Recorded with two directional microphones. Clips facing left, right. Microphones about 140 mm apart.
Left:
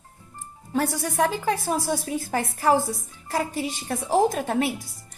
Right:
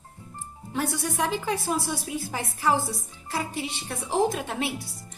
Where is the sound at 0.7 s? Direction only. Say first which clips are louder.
Left 3 dB; 45° left (ahead or behind).